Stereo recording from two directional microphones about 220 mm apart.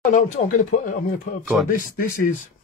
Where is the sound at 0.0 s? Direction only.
35° left (ahead or behind).